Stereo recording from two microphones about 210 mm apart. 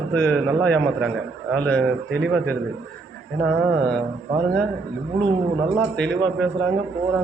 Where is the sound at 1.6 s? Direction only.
5° left (ahead or behind).